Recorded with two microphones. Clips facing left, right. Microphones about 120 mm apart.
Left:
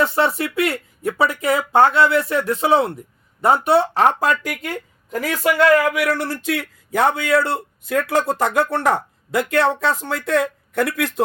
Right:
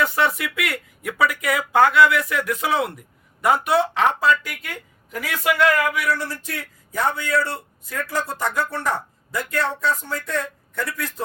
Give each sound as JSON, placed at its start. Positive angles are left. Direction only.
{"t": 0.0, "sound": "speech", "side_deg": 30}
{"t": 5.5, "sound": "speech", "side_deg": 35}
{"t": 5.9, "sound": "speech", "side_deg": 65}